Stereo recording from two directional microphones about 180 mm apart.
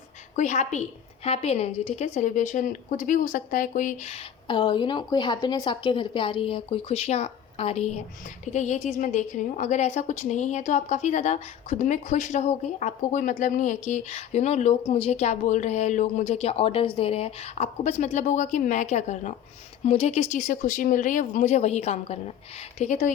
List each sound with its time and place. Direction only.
0.3 s a woman's voice: 40° left (ahead or behind)